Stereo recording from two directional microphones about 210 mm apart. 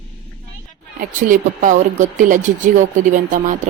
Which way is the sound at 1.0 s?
40° right (ahead or behind).